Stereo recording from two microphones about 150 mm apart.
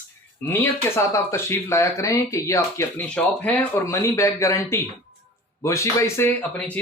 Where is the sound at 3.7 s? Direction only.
20° left (ahead or behind).